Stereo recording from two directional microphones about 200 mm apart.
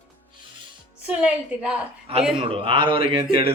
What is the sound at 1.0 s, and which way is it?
Speech, 5° right (ahead or behind).